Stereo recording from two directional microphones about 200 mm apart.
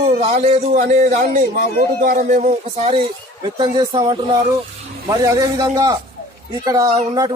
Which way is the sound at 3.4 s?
20° right (ahead or behind).